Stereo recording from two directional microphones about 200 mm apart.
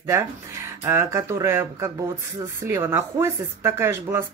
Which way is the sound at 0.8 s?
15° right (ahead or behind).